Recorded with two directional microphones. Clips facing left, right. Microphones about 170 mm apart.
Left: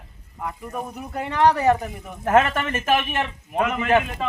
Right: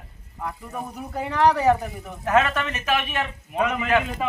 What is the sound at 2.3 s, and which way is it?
Speech, 50° left (ahead or behind).